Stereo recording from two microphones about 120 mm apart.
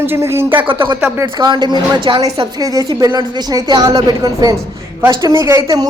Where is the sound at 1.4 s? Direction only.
40° right (ahead or behind).